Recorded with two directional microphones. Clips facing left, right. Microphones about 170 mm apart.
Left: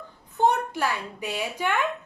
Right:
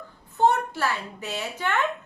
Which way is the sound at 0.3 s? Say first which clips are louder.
Right 1 dB; 15° left (ahead or behind).